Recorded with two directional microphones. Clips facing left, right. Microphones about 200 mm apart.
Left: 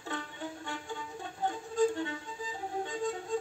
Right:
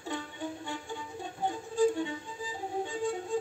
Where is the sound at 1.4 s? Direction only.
15° right (ahead or behind).